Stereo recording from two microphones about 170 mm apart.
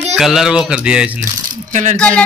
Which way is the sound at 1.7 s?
45° right (ahead or behind).